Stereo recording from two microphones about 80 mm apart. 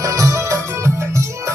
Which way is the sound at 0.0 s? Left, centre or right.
Right.